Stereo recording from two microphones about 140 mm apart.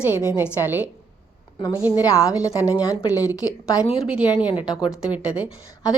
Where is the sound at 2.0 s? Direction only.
25° left (ahead or behind).